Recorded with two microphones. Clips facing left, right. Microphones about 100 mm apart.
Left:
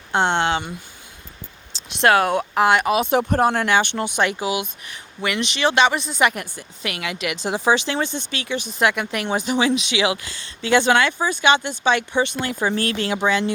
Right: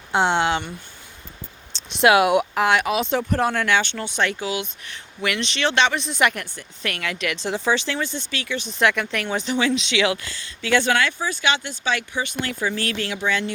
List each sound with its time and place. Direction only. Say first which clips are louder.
0.1 s speech: even; 5° right (ahead or behind)
1.7 s a sound: right 3 dB; centre (ahead or behind)
2.0 s speech: right 1 dB; 10° right (ahead or behind)
2.6 s speech: left 3 dB; centre (ahead or behind)
3.3 s speech: left 1 dB; 35° left (ahead or behind)
4.0 s speech: left 3 dB; 15° left (ahead or behind)
6.3 s speech: left 2 dB; 10° left (ahead or behind)
12.5 s speech: left 4 dB; 40° left (ahead or behind)
12.8 s speech: left 4 dB; 25° left (ahead or behind)